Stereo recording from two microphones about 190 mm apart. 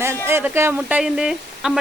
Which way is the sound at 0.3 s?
10° right (ahead or behind).